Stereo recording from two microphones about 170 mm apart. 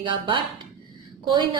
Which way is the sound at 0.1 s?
30° right (ahead or behind).